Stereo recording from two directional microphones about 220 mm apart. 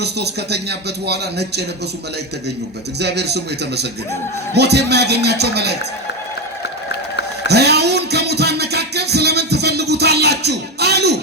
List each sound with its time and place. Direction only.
0.0 s speech: 50° right (ahead or behind)
3.0 s speech: 50° right (ahead or behind)
7.4 s music: 50° right (ahead or behind)